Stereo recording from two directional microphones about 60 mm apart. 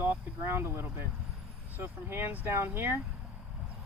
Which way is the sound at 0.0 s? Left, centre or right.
Right.